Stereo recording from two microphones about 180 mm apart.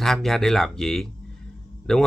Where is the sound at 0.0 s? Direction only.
Centre (ahead or behind).